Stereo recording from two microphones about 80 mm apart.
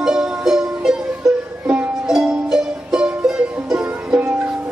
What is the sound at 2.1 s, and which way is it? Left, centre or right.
Music, centre.